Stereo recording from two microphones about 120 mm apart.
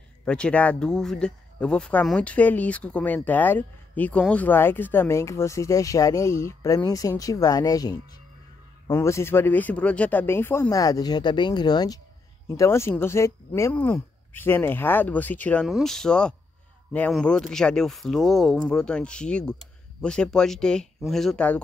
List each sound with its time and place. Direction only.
0.2 s speech: 10° left (ahead or behind)
10.7 s speech: 30° left (ahead or behind)
12.4 s speech: 25° left (ahead or behind)
15.6 s speech: centre (ahead or behind)